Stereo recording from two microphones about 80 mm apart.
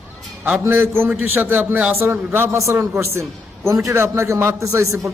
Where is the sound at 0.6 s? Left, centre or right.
Right.